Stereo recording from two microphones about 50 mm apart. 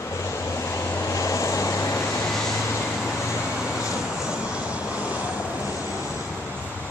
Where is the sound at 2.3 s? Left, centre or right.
Centre.